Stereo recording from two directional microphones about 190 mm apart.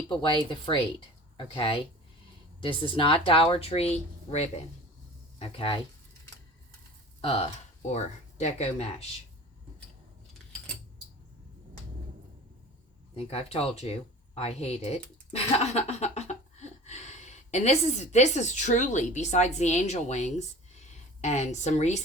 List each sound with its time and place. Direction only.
0.1 s speech: 25° left (ahead or behind)
7.2 s speech: 30° left (ahead or behind)
13.1 s speech: 30° left (ahead or behind)